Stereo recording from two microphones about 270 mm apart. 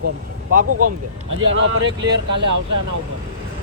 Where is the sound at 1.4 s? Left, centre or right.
Right.